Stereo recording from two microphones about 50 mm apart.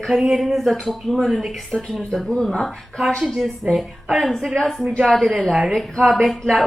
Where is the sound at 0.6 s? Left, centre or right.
Centre.